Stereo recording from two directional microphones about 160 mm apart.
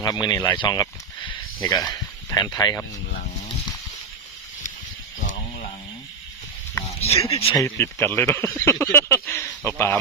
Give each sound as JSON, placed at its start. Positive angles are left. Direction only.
{"t": 0.0, "sound": "speech", "side_deg": 25}
{"t": 5.2, "sound": "a sound", "side_deg": 50}
{"t": 7.3, "sound": "speech", "side_deg": 35}
{"t": 7.5, "sound": "speech", "side_deg": 20}